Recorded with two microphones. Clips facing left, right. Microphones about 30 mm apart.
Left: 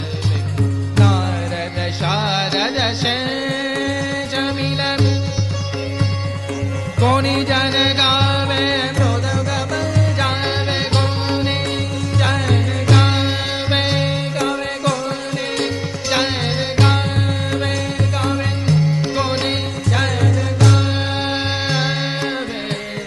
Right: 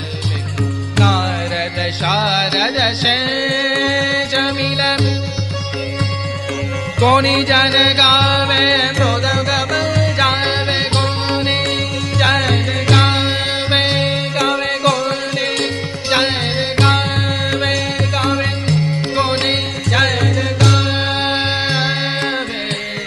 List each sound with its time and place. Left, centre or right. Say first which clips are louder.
0.9 s music: right 2 dB; right
2.0 s music: right 3 dB; right
3.0 s music: right 4 dB; right
4.5 s music: right 4 dB; right
7.0 s music: right 4 dB; right
7.8 s music: right 4 dB; right
8.9 s music: right 4 dB; right
10.5 s music: right 3 dB; right
12.2 s music: right 5 dB; right
12.9 s music: right 2 dB; right
14.5 s music: right 5 dB; right
16.1 s music: right 3 dB; right
16.7 s music: right 3 dB; right
21.2 s music: right 4 dB; right